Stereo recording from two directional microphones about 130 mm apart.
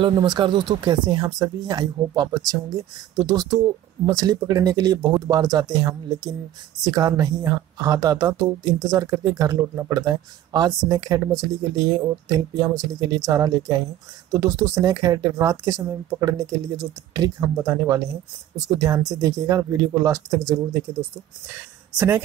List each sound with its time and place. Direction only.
0.0 s speech: 35° right (ahead or behind)
21.9 s speech: 15° right (ahead or behind)